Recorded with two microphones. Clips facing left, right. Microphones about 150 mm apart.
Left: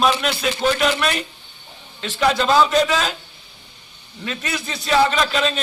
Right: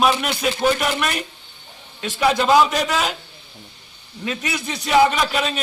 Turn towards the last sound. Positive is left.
turn(degrees=-10)  # may be behind; listen again after turning